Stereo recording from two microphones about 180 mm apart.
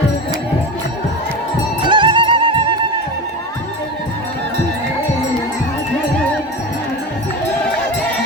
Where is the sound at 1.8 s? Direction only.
25° right (ahead or behind).